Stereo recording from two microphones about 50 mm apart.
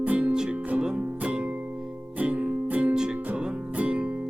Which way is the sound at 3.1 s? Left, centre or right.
Right.